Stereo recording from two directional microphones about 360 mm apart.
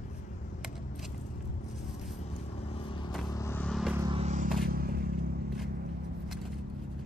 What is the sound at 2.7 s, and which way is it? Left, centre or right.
Vehicle, centre.